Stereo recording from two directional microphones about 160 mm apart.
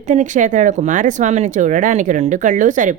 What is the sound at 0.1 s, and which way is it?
Speech, 50° right (ahead or behind).